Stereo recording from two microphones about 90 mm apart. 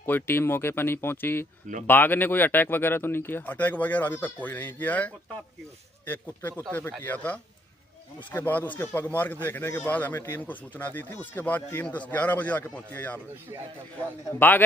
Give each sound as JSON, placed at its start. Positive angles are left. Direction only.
{"t": 0.0, "sound": "speech", "side_deg": 25}